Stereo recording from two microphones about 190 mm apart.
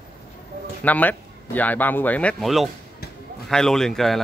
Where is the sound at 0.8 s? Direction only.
10° left (ahead or behind).